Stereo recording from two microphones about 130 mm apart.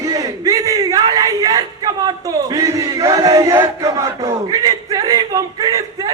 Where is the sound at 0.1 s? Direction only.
25° right (ahead or behind).